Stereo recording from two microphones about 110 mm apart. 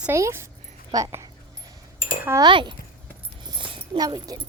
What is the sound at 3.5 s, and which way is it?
Dog, 50° right (ahead or behind).